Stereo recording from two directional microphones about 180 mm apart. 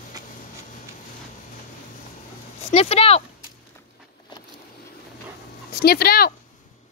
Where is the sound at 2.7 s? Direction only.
35° left (ahead or behind).